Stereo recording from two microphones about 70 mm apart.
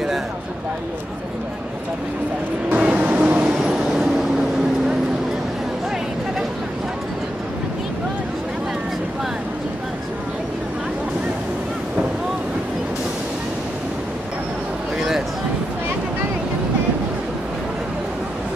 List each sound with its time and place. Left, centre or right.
2.7 s vehicle: right
3.5 s vehicle: centre